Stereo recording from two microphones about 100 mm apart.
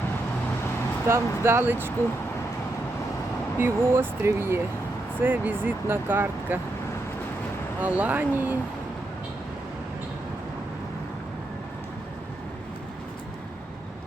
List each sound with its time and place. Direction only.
1.0 s speech: 25° right (ahead or behind)
3.6 s speech: 25° right (ahead or behind)
7.8 s speech: 15° right (ahead or behind)